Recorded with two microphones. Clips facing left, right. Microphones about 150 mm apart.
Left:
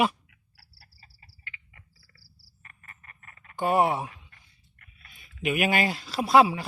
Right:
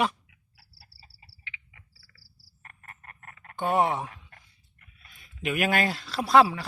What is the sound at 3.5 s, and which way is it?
Speech, 5° left (ahead or behind).